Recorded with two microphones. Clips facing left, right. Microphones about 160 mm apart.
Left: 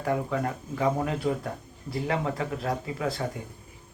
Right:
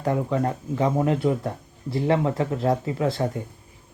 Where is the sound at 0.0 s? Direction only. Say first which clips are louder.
Right 4 dB; 30° right (ahead or behind).